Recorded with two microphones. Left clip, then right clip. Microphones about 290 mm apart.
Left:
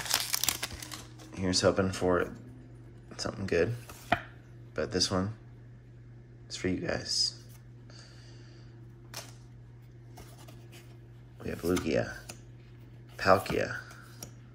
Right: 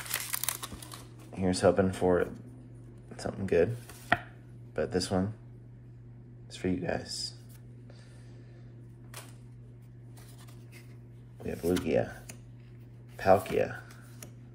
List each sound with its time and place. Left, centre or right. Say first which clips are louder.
0.3 s crumpling: left 5 dB; left
1.4 s speech: right 1 dB; centre
3.1 s chopping: right 1 dB; centre
4.7 s speech: even; centre
6.5 s speech: even; centre
11.4 s speech: right 1 dB; centre